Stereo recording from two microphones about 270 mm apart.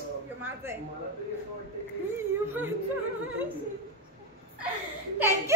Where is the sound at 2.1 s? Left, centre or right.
Centre.